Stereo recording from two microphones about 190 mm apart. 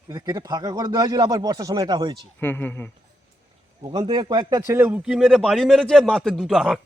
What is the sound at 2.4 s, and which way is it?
Speech, 10° left (ahead or behind).